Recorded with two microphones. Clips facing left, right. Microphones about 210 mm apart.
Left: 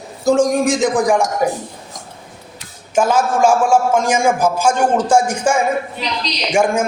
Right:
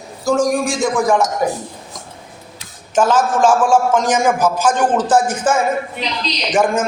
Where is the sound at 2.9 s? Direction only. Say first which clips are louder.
Even; 10° left (ahead or behind).